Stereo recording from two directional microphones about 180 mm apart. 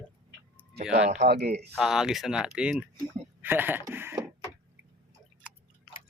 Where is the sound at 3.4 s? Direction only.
10° right (ahead or behind).